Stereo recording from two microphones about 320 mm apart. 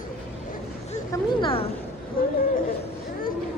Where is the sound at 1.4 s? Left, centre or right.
Centre.